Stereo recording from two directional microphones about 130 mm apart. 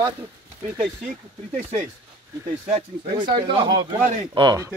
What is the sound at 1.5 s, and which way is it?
Speech, 60° right (ahead or behind).